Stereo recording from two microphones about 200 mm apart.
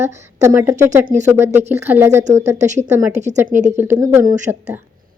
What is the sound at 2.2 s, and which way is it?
A woman's voice, 35° right (ahead or behind).